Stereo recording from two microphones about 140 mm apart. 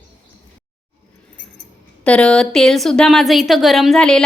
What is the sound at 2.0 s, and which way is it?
A woman's voice, 5° left (ahead or behind).